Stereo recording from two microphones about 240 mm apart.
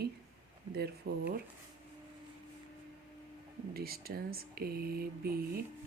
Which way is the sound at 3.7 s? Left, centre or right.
Right.